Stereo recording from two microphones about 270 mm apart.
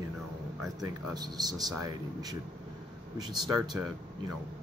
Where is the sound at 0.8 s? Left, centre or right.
Centre.